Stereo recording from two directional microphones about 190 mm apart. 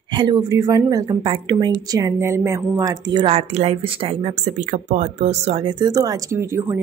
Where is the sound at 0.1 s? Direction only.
25° right (ahead or behind).